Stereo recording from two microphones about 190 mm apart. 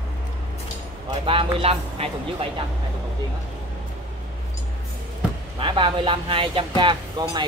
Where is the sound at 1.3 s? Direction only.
30° right (ahead or behind).